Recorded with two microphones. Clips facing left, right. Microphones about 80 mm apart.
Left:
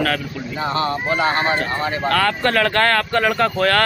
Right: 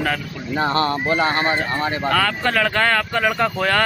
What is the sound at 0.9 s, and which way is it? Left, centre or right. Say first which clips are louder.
Speech: even; left.